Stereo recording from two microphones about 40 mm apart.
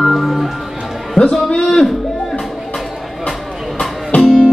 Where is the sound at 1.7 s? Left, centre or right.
Centre.